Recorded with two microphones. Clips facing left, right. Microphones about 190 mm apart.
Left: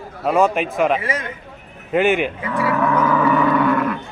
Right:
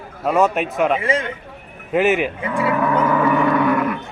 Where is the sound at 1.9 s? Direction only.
Centre (ahead or behind).